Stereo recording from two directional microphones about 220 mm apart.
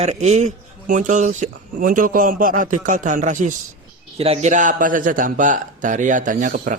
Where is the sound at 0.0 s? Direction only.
30° right (ahead or behind).